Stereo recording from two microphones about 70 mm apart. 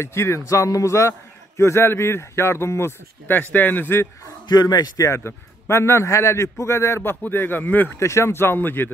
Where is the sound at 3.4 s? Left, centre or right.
Left.